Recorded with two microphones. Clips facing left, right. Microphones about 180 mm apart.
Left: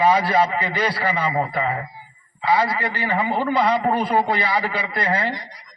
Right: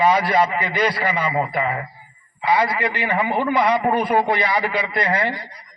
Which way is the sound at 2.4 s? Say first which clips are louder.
Right 1 dB; 15° right (ahead or behind).